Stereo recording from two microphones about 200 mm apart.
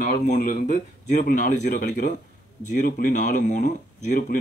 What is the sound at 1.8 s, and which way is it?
Speech, 40° left (ahead or behind).